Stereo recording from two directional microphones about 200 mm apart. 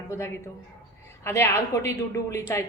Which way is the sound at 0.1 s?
10° left (ahead or behind).